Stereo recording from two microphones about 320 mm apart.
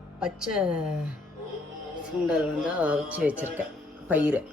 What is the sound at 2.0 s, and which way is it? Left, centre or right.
Speech, centre.